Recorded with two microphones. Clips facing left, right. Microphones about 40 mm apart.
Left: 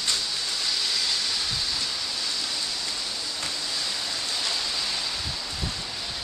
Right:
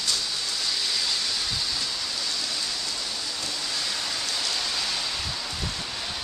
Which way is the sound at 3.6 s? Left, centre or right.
Centre.